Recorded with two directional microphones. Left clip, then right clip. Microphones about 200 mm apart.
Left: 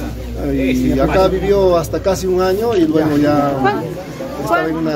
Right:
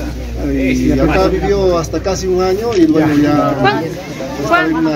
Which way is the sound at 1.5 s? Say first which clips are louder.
Left 1 dB; 25° left (ahead or behind).